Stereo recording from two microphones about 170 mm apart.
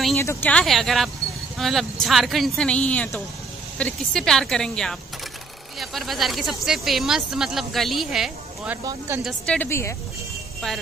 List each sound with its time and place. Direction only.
0.1 s speech: 15° left (ahead or behind); by 8.7 s centre (ahead or behind)
8.8 s speech: 15° right (ahead or behind)
9.2 s a woman's voice: 10° left (ahead or behind)